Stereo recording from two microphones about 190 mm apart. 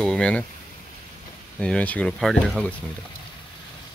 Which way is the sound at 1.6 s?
5° left (ahead or behind).